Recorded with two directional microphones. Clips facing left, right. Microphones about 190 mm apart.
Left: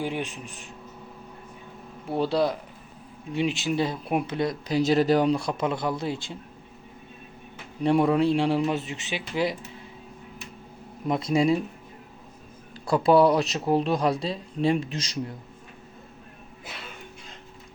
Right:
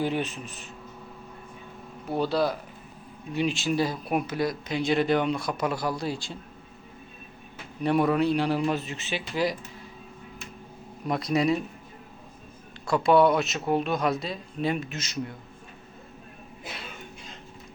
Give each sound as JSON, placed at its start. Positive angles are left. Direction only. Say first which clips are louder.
{"t": 0.0, "sound": "a man's voice", "louder": "right 2 dB", "side_deg": 15}
{"t": 2.1, "sound": "speech", "louder": "left 1 dB", "side_deg": 25}
{"t": 7.9, "sound": "speech", "louder": "left 2 dB", "side_deg": 25}
{"t": 11.1, "sound": "speech", "louder": "left 2 dB", "side_deg": 25}
{"t": 12.9, "sound": "speech", "louder": "left 1 dB", "side_deg": 35}